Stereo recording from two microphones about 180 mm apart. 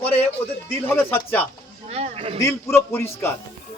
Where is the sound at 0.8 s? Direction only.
10° left (ahead or behind).